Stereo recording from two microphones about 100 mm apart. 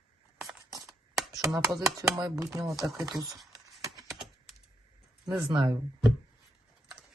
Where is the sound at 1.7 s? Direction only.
40° right (ahead or behind).